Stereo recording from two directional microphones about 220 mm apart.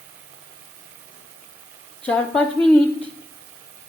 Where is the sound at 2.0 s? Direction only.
5° left (ahead or behind).